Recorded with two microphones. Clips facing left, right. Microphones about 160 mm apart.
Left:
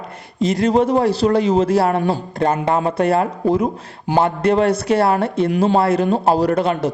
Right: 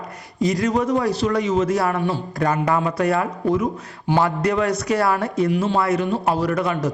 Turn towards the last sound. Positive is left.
turn(degrees=30)  # may be behind; listen again after turning